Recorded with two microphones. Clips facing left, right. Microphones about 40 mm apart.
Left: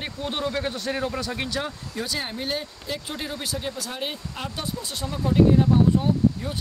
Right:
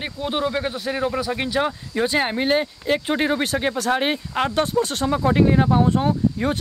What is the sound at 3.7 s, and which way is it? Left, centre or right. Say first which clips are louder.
Speech: right 10 dB; right.